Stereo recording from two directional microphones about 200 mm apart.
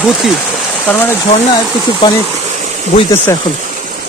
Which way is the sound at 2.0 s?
20° left (ahead or behind).